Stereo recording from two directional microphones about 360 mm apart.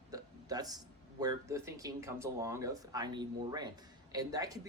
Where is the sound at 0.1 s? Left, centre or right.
Centre.